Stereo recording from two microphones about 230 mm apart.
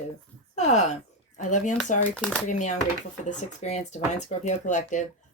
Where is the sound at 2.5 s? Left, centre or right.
Left.